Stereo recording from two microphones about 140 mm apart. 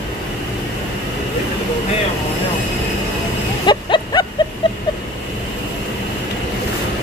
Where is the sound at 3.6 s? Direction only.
30° left (ahead or behind).